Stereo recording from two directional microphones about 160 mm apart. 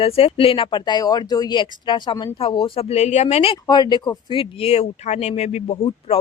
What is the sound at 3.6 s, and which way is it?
Speech, 25° left (ahead or behind).